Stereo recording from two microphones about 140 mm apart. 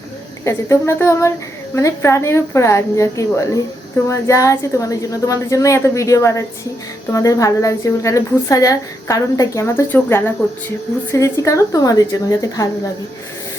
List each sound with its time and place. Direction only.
0.4 s a woman's voice: 20° left (ahead or behind)